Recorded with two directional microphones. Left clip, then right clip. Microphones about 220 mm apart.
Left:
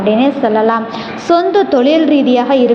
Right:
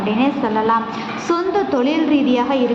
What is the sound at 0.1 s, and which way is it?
A woman's voice, 20° left (ahead or behind).